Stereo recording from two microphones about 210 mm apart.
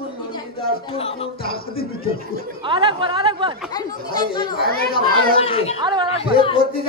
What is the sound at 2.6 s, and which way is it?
Speech, 25° right (ahead or behind).